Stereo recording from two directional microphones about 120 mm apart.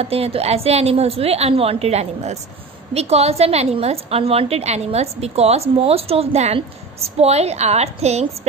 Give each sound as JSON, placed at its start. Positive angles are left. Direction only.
{"t": 0.0, "sound": "a woman's voice", "side_deg": -55}